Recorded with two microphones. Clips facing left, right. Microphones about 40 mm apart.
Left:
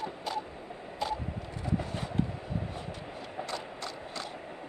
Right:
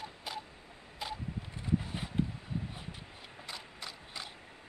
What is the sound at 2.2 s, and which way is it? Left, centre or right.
Vehicle, centre.